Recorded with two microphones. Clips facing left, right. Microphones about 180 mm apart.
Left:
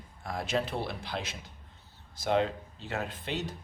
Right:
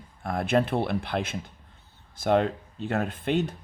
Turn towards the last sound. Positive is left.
turn(degrees=-55)  # may be behind; listen again after turning